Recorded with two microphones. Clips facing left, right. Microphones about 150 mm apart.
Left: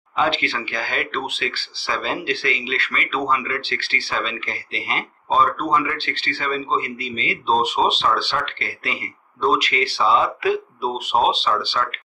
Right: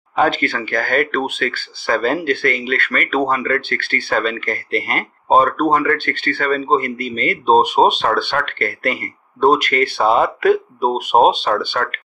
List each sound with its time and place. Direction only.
0.1 s speech: 50° right (ahead or behind)